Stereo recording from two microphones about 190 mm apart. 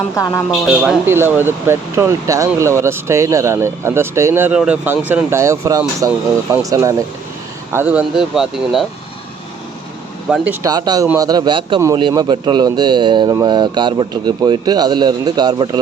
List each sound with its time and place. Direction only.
0.7 s speech: 5° right (ahead or behind)
10.2 s speech: 5° right (ahead or behind); by 15.8 s 20° right (ahead or behind)